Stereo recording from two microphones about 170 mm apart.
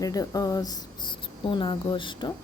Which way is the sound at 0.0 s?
20° left (ahead or behind).